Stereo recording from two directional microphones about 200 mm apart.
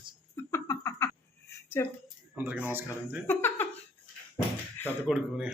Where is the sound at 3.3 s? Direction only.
10° left (ahead or behind).